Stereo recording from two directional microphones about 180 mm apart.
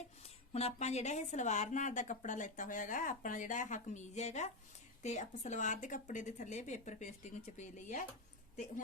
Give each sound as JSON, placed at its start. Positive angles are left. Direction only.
{"t": 0.2, "sound": "a woman's voice", "side_deg": 35}